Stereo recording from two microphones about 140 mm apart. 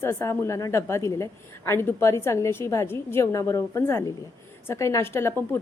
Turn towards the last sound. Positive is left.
turn(degrees=15)  # may be behind; listen again after turning